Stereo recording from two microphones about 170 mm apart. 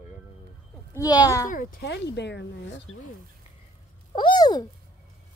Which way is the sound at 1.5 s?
55° left (ahead or behind).